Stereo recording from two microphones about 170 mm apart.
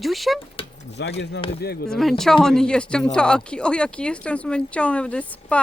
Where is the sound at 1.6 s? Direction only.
70° left (ahead or behind).